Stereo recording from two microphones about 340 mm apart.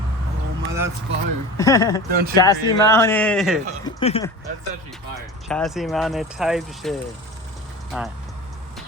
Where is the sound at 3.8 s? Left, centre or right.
Centre.